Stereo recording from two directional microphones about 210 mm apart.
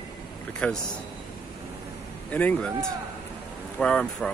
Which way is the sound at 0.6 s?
5° left (ahead or behind).